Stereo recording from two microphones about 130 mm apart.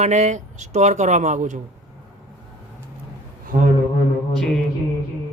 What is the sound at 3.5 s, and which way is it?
Speech, 80° right.